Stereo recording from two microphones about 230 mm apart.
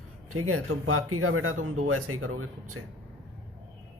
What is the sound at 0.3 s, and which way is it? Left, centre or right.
Speech, right.